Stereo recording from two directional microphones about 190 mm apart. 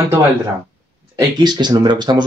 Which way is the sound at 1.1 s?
20° right (ahead or behind).